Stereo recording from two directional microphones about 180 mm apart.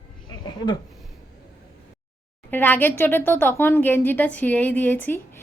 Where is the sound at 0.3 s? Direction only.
25° left (ahead or behind).